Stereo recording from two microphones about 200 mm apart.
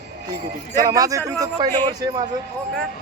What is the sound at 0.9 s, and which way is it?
Speech, 15° right (ahead or behind).